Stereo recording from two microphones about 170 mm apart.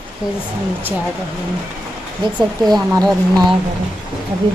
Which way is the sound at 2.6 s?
25° right (ahead or behind).